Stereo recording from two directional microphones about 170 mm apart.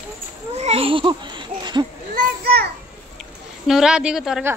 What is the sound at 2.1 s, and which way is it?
Children playing, 65° right (ahead or behind).